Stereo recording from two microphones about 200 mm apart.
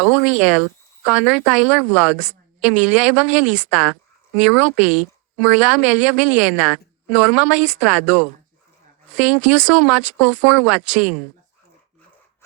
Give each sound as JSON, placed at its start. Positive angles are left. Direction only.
{"t": 0.0, "sound": "speech", "side_deg": -5}